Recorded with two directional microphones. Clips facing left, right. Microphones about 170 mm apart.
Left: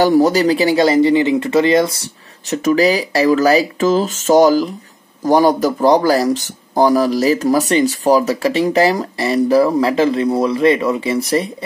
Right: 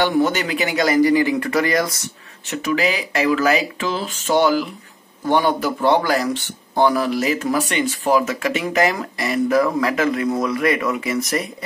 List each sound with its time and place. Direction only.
0.0 s speech: 35° left (ahead or behind)
2.5 s speech: 40° left (ahead or behind)